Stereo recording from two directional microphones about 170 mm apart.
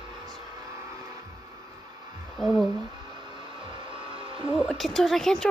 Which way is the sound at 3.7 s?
30° right (ahead or behind).